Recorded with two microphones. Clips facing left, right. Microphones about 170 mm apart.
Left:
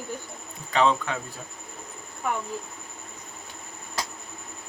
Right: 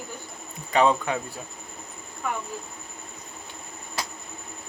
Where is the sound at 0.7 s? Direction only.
10° right (ahead or behind).